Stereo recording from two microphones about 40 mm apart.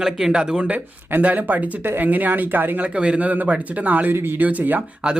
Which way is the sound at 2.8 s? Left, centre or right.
Right.